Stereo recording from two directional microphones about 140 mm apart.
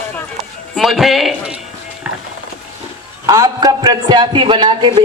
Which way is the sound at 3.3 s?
25° right (ahead or behind).